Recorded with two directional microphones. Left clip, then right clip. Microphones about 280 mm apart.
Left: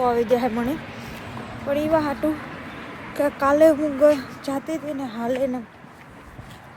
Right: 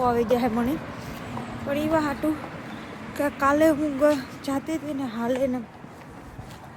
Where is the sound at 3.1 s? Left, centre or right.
Centre.